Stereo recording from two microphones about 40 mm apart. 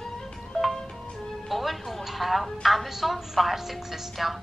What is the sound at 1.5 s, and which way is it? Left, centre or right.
A woman's voice, centre.